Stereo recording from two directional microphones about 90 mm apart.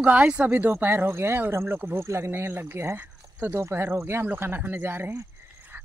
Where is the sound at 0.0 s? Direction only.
15° right (ahead or behind).